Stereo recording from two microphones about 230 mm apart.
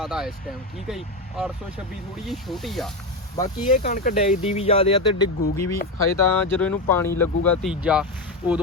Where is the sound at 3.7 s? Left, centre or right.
Left.